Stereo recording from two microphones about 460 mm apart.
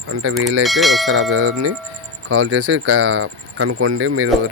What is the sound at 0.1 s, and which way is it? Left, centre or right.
Speech, right.